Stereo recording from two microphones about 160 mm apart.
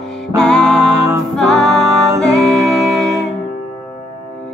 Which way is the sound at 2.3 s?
20° right (ahead or behind).